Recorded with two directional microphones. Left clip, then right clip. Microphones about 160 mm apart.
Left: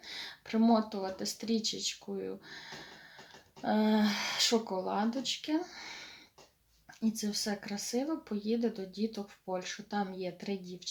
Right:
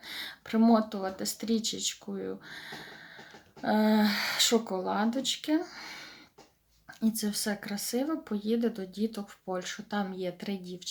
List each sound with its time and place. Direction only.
0.0 s speech: 20° right (ahead or behind)
7.2 s speech: 20° right (ahead or behind)